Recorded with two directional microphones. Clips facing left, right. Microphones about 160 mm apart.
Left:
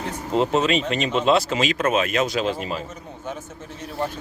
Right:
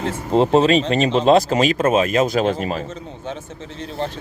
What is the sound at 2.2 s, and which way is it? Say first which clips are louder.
Speech: right 5 dB; 50° right (ahead or behind).